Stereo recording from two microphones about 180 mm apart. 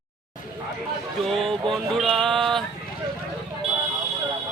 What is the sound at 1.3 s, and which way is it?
Speech, centre (ahead or behind).